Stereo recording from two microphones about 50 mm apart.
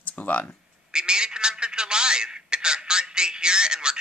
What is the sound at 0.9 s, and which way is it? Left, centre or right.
Telephone, centre.